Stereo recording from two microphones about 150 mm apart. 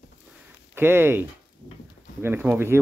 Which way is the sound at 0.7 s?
15° right (ahead or behind).